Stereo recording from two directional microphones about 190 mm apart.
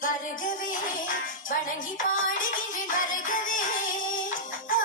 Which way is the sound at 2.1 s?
45° left (ahead or behind).